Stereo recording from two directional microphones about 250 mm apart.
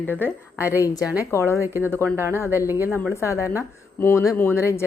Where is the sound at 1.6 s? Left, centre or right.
Centre.